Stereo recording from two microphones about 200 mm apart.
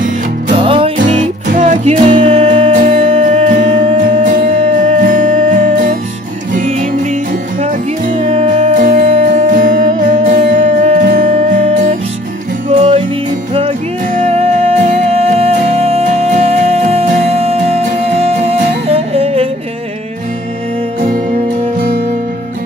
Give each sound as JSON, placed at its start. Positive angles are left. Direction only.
{"t": 0.6, "sound": "music", "side_deg": -25}
{"t": 1.1, "sound": "music", "side_deg": -35}
{"t": 8.2, "sound": "music", "side_deg": -30}
{"t": 13.6, "sound": "music", "side_deg": -35}